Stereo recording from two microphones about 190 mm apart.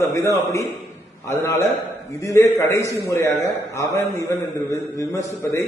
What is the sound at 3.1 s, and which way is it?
A man's voice, 15° left (ahead or behind).